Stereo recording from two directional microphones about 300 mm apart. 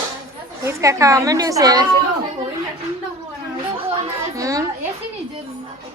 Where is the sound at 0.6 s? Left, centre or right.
Centre.